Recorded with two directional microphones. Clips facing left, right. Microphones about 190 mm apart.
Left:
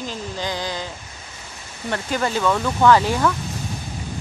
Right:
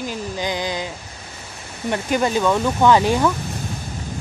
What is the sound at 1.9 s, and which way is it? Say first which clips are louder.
Speech: right 3 dB; 15° right (ahead or behind).